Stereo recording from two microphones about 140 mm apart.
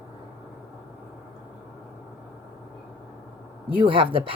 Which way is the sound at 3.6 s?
40° right (ahead or behind).